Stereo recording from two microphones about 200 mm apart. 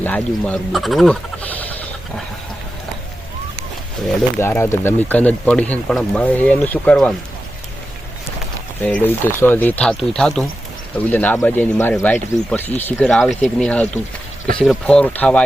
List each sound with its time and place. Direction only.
0.0 s speech: 5° left (ahead or behind)
4.4 s speech: 10° left (ahead or behind)
8.8 s speech: 10° left (ahead or behind)